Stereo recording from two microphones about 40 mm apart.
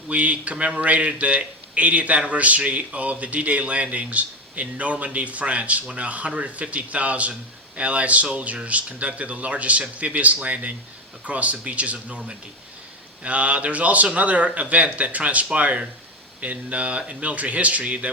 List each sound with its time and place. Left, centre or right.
0.1 s speech: right